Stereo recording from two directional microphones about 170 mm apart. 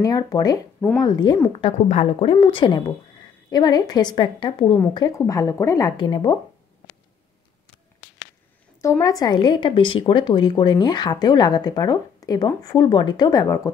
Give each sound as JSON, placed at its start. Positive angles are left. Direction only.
{"t": 0.0, "sound": "a woman's voice", "side_deg": 20}
{"t": 8.8, "sound": "speech", "side_deg": 20}